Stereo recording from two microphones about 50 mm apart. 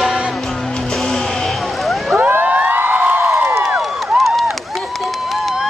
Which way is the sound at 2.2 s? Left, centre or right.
Right.